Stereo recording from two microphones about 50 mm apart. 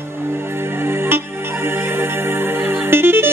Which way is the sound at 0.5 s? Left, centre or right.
Right.